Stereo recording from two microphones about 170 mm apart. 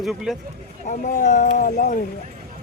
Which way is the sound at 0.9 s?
45° left (ahead or behind).